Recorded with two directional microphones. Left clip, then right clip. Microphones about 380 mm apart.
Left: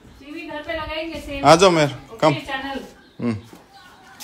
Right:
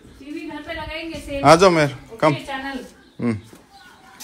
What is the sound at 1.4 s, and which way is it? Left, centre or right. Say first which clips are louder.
A woman's voice: even; centre.